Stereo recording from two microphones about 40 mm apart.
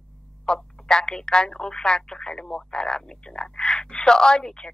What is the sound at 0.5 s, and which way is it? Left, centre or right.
Speech, centre.